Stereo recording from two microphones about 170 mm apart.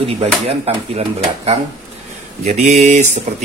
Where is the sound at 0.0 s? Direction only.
35° right (ahead or behind).